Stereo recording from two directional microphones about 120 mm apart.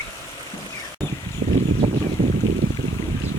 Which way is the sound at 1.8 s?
40° right (ahead or behind).